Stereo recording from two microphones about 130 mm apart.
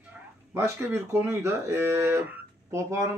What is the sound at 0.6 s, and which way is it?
Speech, 20° right (ahead or behind).